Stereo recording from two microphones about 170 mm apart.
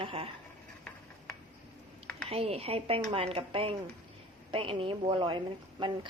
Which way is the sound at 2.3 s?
35° right (ahead or behind).